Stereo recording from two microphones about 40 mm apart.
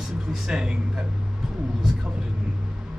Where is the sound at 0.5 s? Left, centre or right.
Centre.